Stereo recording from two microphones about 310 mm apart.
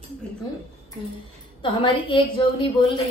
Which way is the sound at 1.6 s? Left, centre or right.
Centre.